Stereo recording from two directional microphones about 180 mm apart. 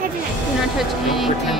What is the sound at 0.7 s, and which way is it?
Music, centre (ahead or behind).